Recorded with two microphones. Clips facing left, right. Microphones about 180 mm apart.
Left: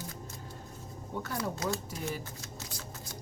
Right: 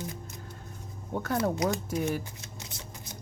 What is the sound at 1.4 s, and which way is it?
Speech, 20° right (ahead or behind).